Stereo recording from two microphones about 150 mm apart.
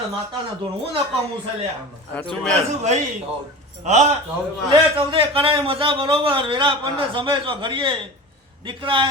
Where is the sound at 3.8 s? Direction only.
50° right (ahead or behind).